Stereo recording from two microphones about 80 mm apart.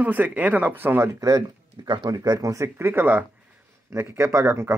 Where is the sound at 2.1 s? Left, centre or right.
Right.